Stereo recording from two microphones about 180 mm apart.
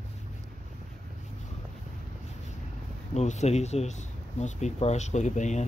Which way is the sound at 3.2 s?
40° left (ahead or behind).